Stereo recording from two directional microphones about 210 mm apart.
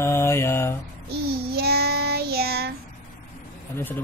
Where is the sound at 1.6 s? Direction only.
50° right (ahead or behind).